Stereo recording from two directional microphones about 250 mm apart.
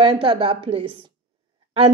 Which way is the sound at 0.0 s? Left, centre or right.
Centre.